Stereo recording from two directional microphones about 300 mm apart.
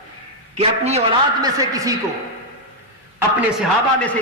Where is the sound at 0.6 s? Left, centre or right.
Right.